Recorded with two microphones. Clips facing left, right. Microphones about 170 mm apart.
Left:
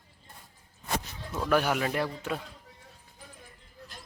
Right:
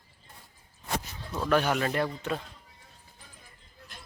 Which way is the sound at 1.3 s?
10° left (ahead or behind).